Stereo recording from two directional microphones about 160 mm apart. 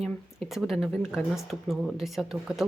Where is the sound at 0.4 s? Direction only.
Centre (ahead or behind).